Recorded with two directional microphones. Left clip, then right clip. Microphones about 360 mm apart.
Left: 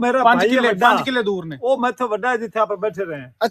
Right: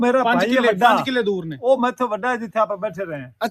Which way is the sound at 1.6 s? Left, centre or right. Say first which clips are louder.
Right 1 dB; right.